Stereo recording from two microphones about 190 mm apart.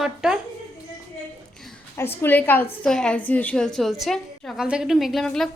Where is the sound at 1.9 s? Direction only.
10° left (ahead or behind).